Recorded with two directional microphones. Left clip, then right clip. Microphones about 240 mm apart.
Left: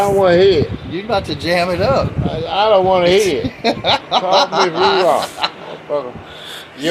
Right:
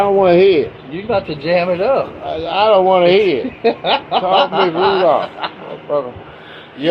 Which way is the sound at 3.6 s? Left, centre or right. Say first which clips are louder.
Right 1 dB; left.